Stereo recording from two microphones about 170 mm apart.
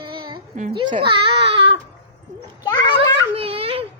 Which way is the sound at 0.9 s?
30° right (ahead or behind).